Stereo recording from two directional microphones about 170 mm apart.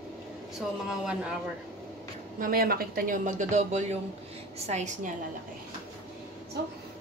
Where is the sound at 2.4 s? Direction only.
60° right (ahead or behind); by 5.1 s 45° right (ahead or behind).